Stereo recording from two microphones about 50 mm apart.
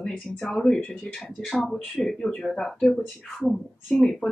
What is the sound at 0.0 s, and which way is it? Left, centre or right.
Speech, centre.